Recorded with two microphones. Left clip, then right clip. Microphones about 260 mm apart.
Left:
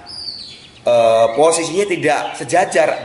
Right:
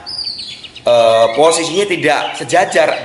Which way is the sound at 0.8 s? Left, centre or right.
Left.